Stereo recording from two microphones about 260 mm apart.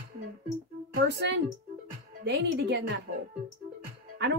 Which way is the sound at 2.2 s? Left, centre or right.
Right.